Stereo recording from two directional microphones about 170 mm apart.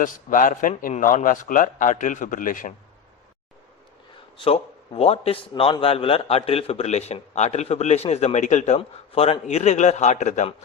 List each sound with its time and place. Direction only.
0.0 s speech: 50° left (ahead or behind)
4.4 s a man's voice: 30° left (ahead or behind)